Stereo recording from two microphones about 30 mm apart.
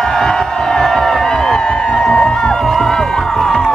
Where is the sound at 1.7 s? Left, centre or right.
Left.